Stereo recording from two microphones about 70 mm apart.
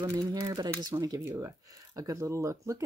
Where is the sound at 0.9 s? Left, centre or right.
Right.